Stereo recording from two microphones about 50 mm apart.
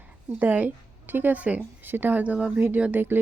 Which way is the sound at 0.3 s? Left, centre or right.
Right.